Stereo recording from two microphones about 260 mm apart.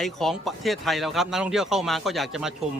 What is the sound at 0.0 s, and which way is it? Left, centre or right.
Speech, centre.